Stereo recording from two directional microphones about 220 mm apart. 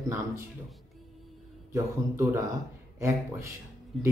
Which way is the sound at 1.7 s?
15° right (ahead or behind).